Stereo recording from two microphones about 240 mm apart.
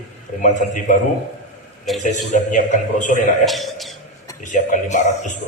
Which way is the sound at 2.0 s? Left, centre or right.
Left.